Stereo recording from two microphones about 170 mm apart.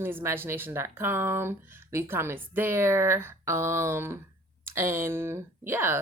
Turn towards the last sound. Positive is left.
turn(degrees=-15)  # may be behind; listen again after turning